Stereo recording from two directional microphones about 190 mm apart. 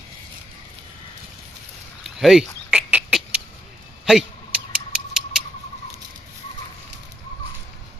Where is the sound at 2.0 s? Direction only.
Centre (ahead or behind).